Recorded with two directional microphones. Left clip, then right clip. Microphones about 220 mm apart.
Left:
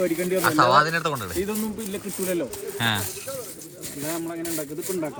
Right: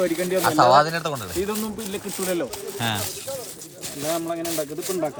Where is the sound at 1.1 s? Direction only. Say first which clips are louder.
Right 1 dB; centre (ahead or behind).